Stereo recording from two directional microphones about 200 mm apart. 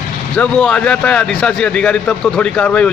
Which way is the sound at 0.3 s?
5° left (ahead or behind).